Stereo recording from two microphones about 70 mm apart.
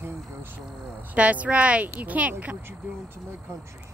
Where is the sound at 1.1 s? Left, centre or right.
Centre.